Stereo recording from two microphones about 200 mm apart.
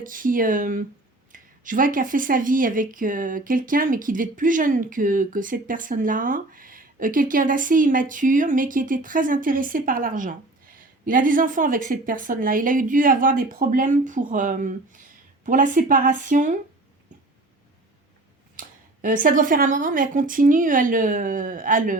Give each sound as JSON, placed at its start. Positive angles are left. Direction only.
{"t": 0.0, "sound": "speech", "side_deg": -45}
{"t": 18.6, "sound": "a sound", "side_deg": -45}
{"t": 19.0, "sound": "speech", "side_deg": -40}